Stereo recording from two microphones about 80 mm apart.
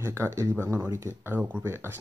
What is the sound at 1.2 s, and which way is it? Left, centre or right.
Speech, right.